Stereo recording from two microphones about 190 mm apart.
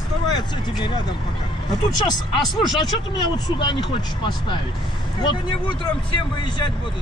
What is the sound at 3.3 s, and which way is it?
Speech, 25° left (ahead or behind).